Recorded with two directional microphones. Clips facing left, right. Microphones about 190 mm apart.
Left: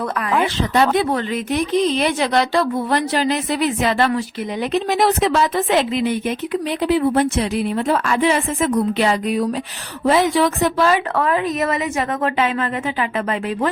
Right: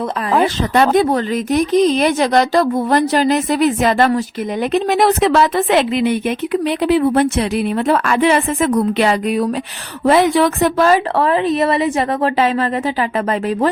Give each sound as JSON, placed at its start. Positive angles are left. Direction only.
{"t": 0.3, "sound": "speech", "side_deg": -35}
{"t": 0.7, "sound": "a woman's voice", "side_deg": -55}
{"t": 1.1, "sound": "speech", "side_deg": -40}
{"t": 4.7, "sound": "a woman's voice", "side_deg": -55}
{"t": 11.2, "sound": "a woman's voice", "side_deg": -30}